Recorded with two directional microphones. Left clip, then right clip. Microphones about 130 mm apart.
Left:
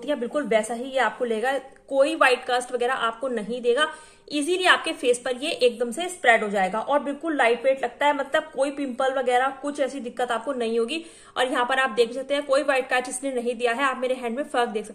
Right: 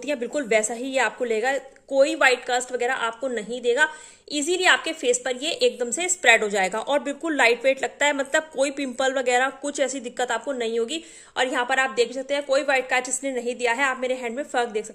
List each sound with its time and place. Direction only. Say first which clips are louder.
0.1 s a woman's voice: even; 85° right; by 5.7 s 40° right (ahead or behind)
5.8 s a woman's voice: right 1 dB; 90° right; by 10.4 s 60° right (ahead or behind)
10.6 s a woman's voice: left 1 dB; 35° right (ahead or behind)